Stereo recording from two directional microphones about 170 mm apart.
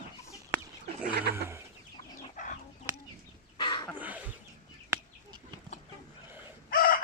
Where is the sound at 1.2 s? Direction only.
70° right (ahead or behind).